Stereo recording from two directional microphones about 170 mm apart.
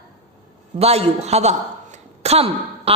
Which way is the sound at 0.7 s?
35° right (ahead or behind).